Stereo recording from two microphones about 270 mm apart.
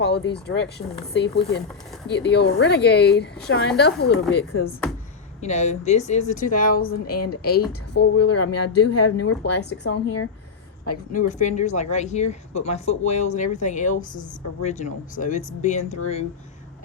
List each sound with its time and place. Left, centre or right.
0.0 s speech: left
5.4 s speech: left
8.2 s speech: left
9.2 s speech: left
11.1 s speech: left